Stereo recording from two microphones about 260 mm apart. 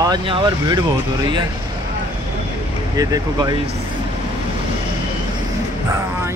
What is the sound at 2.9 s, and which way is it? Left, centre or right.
Speech, centre.